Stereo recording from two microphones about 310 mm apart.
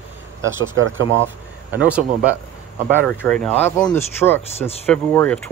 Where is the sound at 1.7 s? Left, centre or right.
Centre.